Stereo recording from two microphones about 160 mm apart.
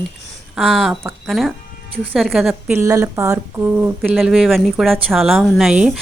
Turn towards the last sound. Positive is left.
turn(degrees=-5)  # may be behind; listen again after turning